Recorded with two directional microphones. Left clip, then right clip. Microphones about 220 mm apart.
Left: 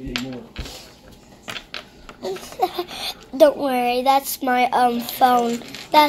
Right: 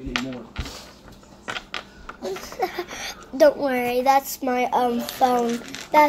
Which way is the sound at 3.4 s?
5° left (ahead or behind).